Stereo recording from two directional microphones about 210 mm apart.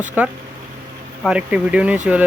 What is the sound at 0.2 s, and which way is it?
Speech, 5° right (ahead or behind).